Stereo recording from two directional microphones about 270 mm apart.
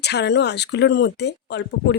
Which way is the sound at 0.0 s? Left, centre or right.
Left.